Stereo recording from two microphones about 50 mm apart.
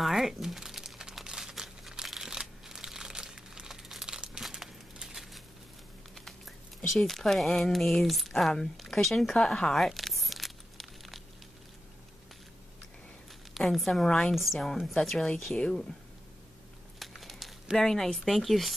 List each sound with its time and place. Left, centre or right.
0.0 s crumpling: centre
5.0 s a sound: centre
6.1 s speech: centre
9.8 s a sound: centre
13.6 s speech: centre
14.0 s speech: centre
14.3 s speech: centre
17.0 s crumpling: centre
17.7 s speech: centre